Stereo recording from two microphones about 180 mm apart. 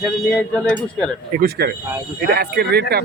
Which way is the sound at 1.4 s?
60° right (ahead or behind).